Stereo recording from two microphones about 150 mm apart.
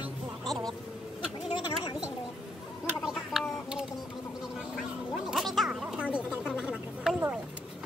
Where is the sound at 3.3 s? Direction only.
Centre (ahead or behind).